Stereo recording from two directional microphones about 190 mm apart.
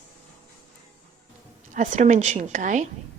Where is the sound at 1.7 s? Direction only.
40° right (ahead or behind).